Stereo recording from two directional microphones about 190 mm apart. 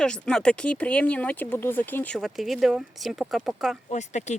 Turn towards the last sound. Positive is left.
turn(degrees=40)  # may be behind; listen again after turning